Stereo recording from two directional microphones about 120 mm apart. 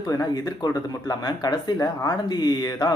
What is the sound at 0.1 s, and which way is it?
Speech, 30° left (ahead or behind).